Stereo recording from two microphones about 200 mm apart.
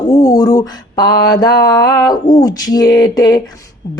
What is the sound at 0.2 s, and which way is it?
Speech, 20° left (ahead or behind).